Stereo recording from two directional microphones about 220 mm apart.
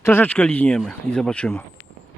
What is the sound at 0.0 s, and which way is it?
Speech, 10° left (ahead or behind).